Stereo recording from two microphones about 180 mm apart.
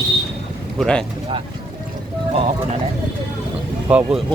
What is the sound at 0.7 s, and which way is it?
Speech, 5° left (ahead or behind).